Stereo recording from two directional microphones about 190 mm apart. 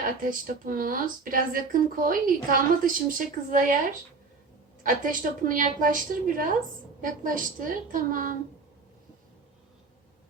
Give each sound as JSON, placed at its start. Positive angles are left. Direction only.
{"t": 0.0, "sound": "speech", "side_deg": -45}
{"t": 4.8, "sound": "speech", "side_deg": -45}